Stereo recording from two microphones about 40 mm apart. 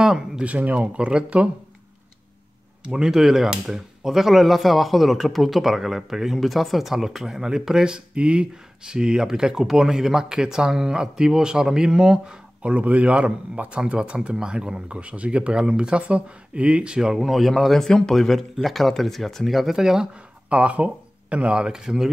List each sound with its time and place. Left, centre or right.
0.4 s speech: right
2.8 s speech: right
3.1 s speech: centre
12.6 s a man's voice: right
16.0 s speech: right
17.1 s speech: centre
17.8 s speech: centre
18.1 s speech: centre
20.4 s speech: right; by 22.1 s centre